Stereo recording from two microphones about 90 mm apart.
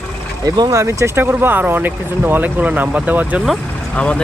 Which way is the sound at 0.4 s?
45° right (ahead or behind).